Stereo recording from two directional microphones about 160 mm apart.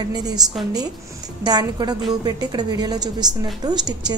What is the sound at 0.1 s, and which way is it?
A woman's voice, 25° right (ahead or behind).